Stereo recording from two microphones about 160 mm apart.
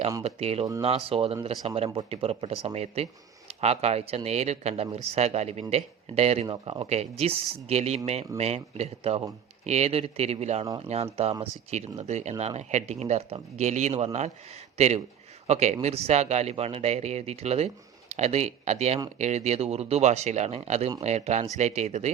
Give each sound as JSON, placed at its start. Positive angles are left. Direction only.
{"t": 0.2, "sound": "speech", "side_deg": -40}